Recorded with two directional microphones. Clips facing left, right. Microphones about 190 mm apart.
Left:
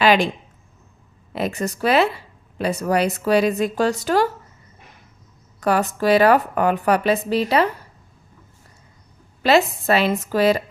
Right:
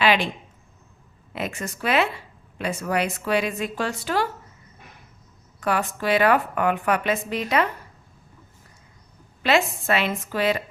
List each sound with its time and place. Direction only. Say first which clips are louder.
0.0 s a sound: left 5 dB; 40° left (ahead or behind)
1.3 s a woman's voice: left 6 dB; 35° left (ahead or behind)
5.5 s a woman's voice: left 5 dB; 40° left (ahead or behind)
9.4 s a woman's voice: left 5 dB; 40° left (ahead or behind)